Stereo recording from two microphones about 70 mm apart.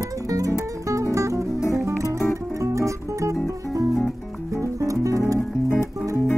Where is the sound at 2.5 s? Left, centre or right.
Right.